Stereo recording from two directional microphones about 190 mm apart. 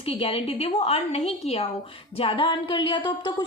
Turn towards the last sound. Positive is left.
turn(degrees=25)  # may be behind; listen again after turning